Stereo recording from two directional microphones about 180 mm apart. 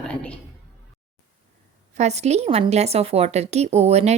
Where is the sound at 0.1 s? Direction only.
5° left (ahead or behind).